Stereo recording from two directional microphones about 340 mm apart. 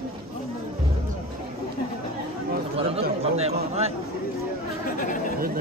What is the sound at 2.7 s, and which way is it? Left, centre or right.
Chatter, centre.